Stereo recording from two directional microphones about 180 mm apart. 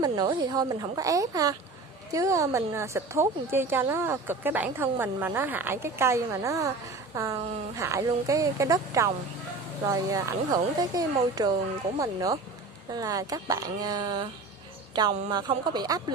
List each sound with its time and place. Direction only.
0.0 s a woman's voice: 25° right (ahead or behind)